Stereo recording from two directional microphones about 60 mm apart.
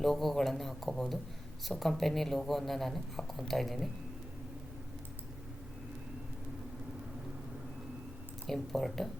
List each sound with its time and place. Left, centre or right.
0.0 s speech: centre
8.4 s speech: centre